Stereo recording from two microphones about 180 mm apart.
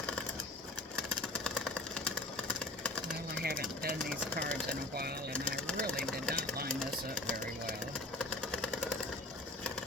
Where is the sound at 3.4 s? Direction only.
55° right (ahead or behind).